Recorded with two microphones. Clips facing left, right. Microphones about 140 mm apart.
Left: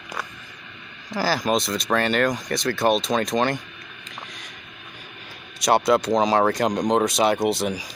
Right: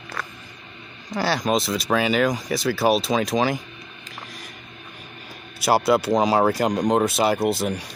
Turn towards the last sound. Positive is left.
turn(degrees=0)  # may be behind; listen again after turning